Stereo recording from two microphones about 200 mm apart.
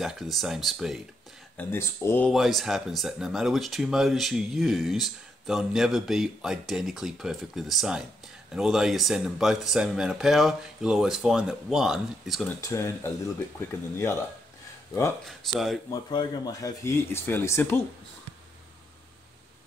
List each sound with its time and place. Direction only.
0.0 s speech: centre (ahead or behind)
1.6 s speech: 10° left (ahead or behind)
12.6 s speech: 15° left (ahead or behind)
15.2 s speech: centre (ahead or behind)
15.9 s speech: 20° left (ahead or behind)